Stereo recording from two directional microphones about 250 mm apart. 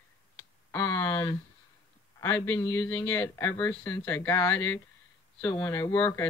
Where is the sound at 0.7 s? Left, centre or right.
Centre.